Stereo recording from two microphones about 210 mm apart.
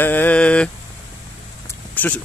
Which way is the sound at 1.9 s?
10° left (ahead or behind).